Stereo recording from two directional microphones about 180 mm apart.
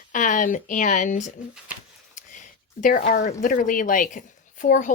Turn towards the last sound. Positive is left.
turn(degrees=45)  # may be behind; listen again after turning